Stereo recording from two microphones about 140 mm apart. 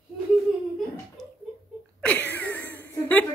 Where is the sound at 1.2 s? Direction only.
Centre (ahead or behind).